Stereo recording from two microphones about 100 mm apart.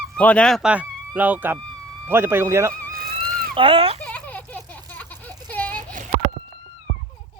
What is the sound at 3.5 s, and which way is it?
Speech, 60° right (ahead or behind).